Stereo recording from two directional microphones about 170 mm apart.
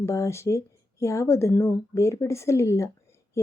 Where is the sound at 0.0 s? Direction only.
15° left (ahead or behind).